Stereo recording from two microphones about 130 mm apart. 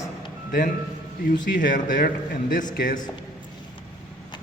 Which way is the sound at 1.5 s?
90° left.